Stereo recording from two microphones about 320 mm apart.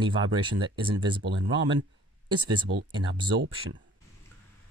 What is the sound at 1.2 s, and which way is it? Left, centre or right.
Speech, right.